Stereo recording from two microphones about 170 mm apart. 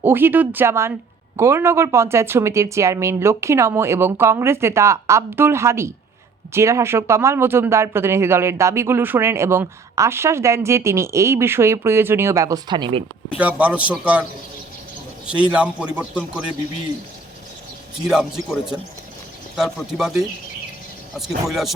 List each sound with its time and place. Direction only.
0.0 s speech: 10° right (ahead or behind); by 13.0 s 25° right (ahead or behind)
13.3 s speech: 10° right (ahead or behind)
15.3 s speech: 5° right (ahead or behind)
18.1 s speech: 5° right (ahead or behind)